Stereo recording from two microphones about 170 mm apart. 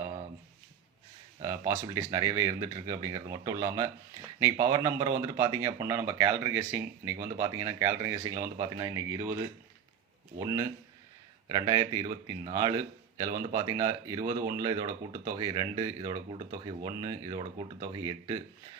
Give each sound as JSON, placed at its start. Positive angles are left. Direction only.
{"t": 1.4, "sound": "a man's voice", "side_deg": -20}
{"t": 10.3, "sound": "a man's voice", "side_deg": -20}